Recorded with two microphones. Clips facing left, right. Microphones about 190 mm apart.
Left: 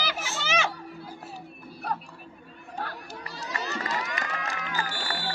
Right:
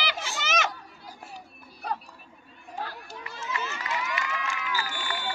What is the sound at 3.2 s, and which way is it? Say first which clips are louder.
Run: right 2 dB; 35° left (ahead or behind).